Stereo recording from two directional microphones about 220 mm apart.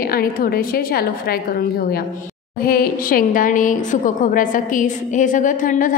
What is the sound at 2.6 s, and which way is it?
A woman's voice, 40° left (ahead or behind).